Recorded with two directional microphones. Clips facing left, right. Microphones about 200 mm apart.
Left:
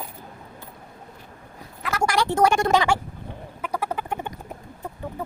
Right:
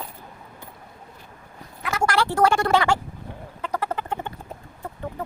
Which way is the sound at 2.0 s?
15° left (ahead or behind).